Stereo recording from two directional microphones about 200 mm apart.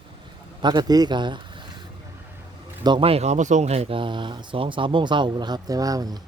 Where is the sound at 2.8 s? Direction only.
25° right (ahead or behind).